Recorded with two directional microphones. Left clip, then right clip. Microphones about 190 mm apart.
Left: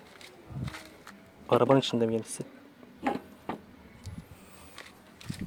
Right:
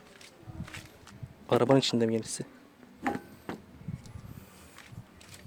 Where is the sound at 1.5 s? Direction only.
25° right (ahead or behind).